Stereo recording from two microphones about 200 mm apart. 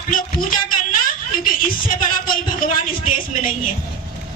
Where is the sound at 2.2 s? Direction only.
45° left (ahead or behind).